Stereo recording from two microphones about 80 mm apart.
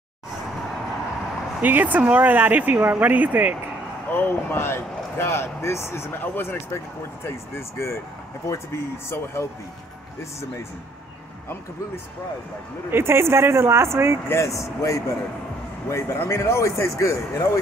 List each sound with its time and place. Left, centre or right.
1.6 s speech: right
4.1 s speech: left
12.9 s speech: right
14.3 s speech: left